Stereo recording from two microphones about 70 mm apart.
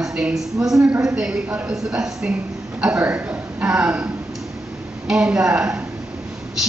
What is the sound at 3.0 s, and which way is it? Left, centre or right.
A man's voice, right.